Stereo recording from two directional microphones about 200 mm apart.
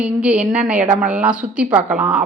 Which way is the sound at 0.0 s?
5° right (ahead or behind).